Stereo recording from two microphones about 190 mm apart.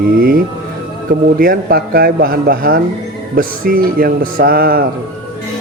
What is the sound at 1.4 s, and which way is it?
Speech, 50° right (ahead or behind).